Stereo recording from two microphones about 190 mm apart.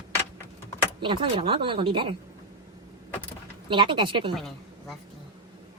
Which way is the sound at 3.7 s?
25° right (ahead or behind).